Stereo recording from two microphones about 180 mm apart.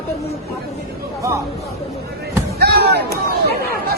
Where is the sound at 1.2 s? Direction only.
15° right (ahead or behind).